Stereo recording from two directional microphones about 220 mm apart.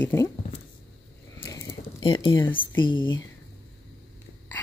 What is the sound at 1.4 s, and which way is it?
Speech, 15° left (ahead or behind).